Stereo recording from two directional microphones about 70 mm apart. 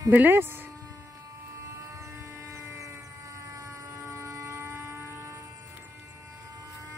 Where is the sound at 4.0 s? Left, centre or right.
Right.